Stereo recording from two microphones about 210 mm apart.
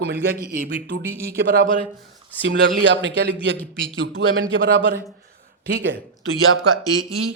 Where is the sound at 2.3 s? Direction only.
10° left (ahead or behind).